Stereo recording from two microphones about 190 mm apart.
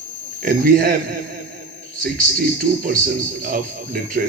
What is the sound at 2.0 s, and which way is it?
Speech, 50° right (ahead or behind).